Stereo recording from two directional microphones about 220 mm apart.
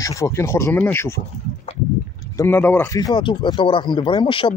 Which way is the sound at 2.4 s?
10° left (ahead or behind).